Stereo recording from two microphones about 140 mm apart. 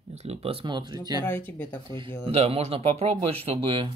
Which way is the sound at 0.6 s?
30° right (ahead or behind).